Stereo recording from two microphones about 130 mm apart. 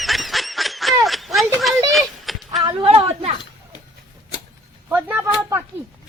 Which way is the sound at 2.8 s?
50° right (ahead or behind).